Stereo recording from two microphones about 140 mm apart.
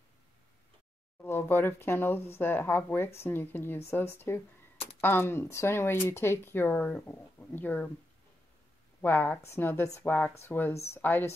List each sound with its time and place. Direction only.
1.2 s speech: 15° left (ahead or behind)
9.0 s speech: 15° left (ahead or behind)